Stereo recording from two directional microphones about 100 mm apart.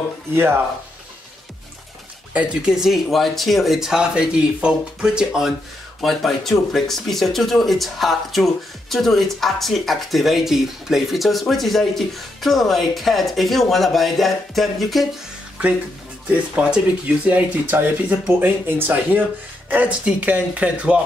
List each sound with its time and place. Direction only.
0.3 s speech: 25° right (ahead or behind)
2.3 s speech: 10° right (ahead or behind)
16.3 s speech: 10° right (ahead or behind)